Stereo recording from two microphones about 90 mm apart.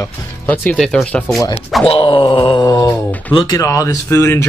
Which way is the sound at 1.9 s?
70° left (ahead or behind).